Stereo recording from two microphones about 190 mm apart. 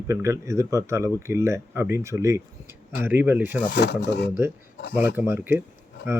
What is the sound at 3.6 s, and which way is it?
Speech, 60° left (ahead or behind).